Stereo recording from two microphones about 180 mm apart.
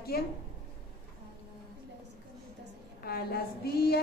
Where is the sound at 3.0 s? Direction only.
60° left (ahead or behind).